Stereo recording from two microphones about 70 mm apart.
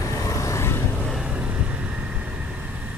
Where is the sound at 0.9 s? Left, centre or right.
Centre.